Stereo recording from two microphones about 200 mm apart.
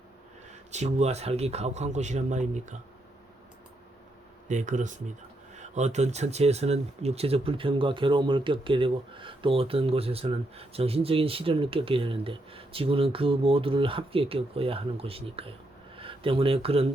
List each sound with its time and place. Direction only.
0.7 s a man's voice: 35° right (ahead or behind)
4.4 s a man's voice: 40° right (ahead or behind)